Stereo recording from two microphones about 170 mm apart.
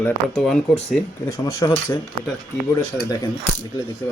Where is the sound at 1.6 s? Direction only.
20° left (ahead or behind).